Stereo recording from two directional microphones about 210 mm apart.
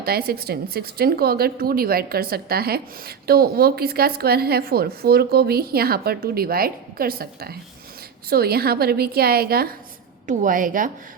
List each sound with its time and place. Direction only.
0.0 s a woman's voice: 45° right (ahead or behind)